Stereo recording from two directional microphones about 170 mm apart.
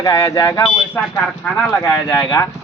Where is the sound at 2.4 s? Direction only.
15° left (ahead or behind).